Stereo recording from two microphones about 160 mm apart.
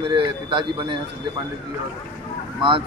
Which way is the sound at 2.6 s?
30° right (ahead or behind).